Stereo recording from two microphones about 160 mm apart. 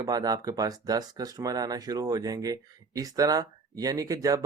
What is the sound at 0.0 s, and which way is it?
Speech, 25° right (ahead or behind).